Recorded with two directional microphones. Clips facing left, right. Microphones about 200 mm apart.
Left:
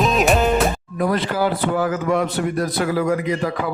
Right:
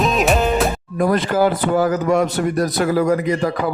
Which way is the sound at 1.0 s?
50° right (ahead or behind).